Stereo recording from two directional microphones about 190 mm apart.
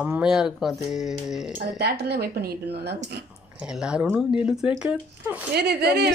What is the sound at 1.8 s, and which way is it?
A woman's voice, 55° right (ahead or behind).